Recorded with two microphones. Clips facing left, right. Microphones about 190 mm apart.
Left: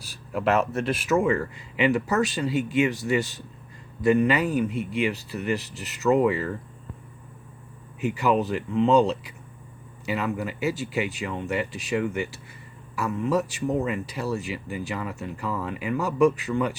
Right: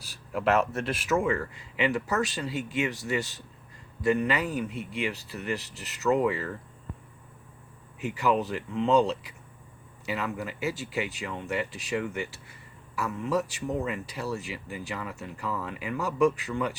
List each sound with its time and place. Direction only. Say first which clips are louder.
0.0 s speech: left 2 dB; 15° left (ahead or behind)
7.9 s speech: left 3 dB; 15° left (ahead or behind)